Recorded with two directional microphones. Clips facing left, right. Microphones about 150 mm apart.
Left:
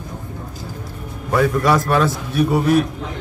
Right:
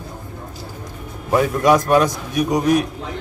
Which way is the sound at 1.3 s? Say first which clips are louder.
Right 1 dB; 15° right (ahead or behind).